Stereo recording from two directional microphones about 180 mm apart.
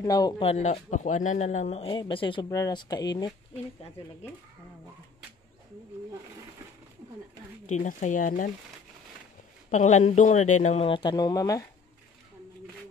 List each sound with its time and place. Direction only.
0.0 s speech: 20° left (ahead or behind)
0.5 s speech: 40° left (ahead or behind); by 3.3 s 20° left (ahead or behind)
7.6 s speech: 45° left (ahead or behind)
9.7 s speech: 40° left (ahead or behind); by 11.6 s 20° left (ahead or behind)